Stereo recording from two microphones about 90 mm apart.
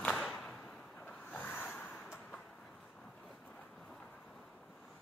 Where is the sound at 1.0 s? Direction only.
20° left (ahead or behind).